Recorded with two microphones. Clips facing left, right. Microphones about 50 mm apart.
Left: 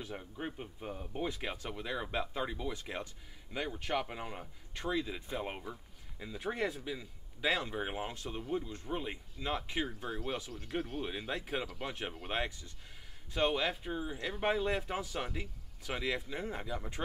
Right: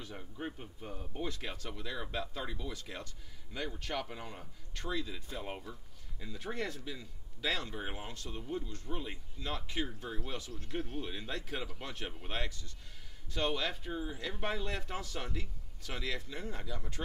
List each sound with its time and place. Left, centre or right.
0.0 s speech: centre